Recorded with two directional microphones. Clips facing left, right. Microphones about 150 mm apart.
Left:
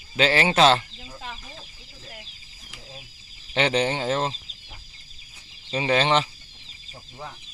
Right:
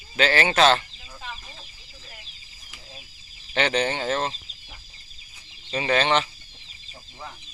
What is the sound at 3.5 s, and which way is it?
Speech, 30° left (ahead or behind).